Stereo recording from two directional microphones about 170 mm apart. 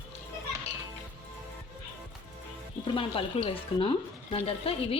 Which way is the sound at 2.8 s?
30° left (ahead or behind).